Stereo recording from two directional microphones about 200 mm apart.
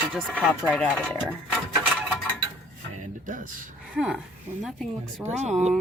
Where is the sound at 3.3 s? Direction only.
40° right (ahead or behind).